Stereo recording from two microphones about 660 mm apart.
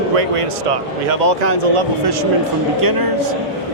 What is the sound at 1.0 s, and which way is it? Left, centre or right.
Speech, right.